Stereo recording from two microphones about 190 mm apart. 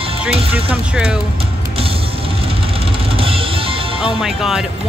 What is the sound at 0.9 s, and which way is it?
Speech, 5° right (ahead or behind).